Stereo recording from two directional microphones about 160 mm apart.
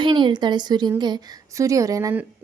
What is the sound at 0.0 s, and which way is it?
Speech, 30° right (ahead or behind).